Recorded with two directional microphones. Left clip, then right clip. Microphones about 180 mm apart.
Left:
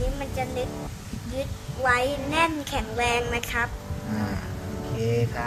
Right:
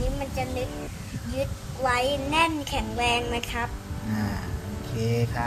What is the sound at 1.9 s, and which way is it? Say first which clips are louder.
A child's voice: left 1 dB; 15° left (ahead or behind).